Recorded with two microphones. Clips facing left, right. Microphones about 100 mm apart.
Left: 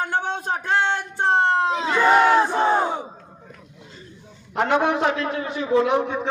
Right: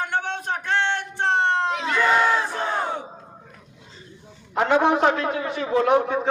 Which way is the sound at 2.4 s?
30° left (ahead or behind).